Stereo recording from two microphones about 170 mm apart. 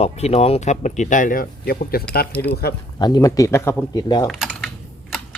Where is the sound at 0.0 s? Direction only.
35° left (ahead or behind); by 2.7 s 70° left (ahead or behind).